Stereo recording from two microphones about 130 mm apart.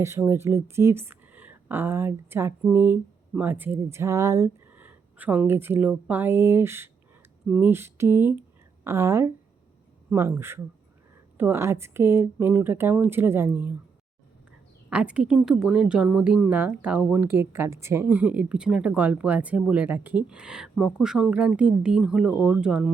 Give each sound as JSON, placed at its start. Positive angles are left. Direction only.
{"t": 0.0, "sound": "speech", "side_deg": -20}
{"t": 4.8, "sound": "speech", "side_deg": -10}
{"t": 7.4, "sound": "speech", "side_deg": -5}
{"t": 7.7, "sound": "speech", "side_deg": -20}
{"t": 14.8, "sound": "speech", "side_deg": -10}